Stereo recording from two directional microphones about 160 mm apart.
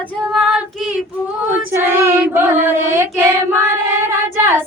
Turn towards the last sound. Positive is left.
turn(degrees=-15)  # may be behind; listen again after turning